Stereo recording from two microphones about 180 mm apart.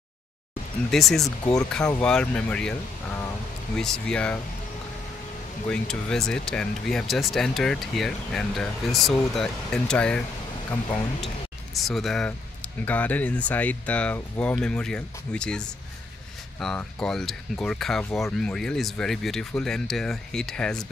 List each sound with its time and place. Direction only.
0.9 s speech: centre (ahead or behind)
1.4 s speech: 20° left (ahead or behind)
2.0 s speech: 5° left (ahead or behind)
3.7 s speech: 5° left (ahead or behind)
5.7 s speech: 5° left (ahead or behind)
11.7 s speech: centre (ahead or behind)